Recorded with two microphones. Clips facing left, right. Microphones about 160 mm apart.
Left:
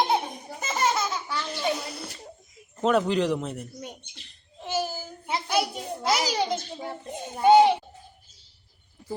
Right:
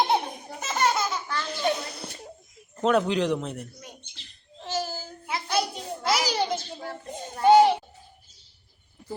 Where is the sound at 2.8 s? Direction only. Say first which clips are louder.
Even; centre (ahead or behind).